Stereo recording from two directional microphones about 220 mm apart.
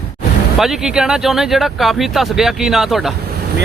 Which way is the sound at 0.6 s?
Centre (ahead or behind).